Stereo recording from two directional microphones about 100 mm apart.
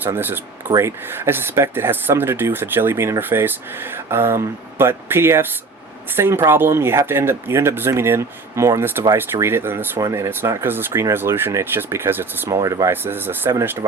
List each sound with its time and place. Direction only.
0.0 s speech: 20° right (ahead or behind)
12.6 s speech: 30° right (ahead or behind)
12.9 s speech: 20° right (ahead or behind)